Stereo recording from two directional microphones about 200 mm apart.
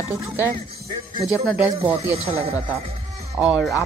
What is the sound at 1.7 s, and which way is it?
Speech, 30° right (ahead or behind).